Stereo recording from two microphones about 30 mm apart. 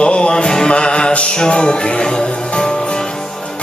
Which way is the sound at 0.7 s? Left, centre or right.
Left.